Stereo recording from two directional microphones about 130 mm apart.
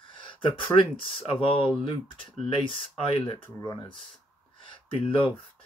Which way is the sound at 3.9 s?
5° left (ahead or behind).